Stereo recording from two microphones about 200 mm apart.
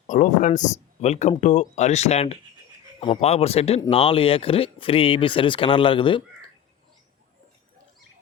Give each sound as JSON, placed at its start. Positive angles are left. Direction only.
{"t": 0.1, "sound": "speech", "side_deg": 40}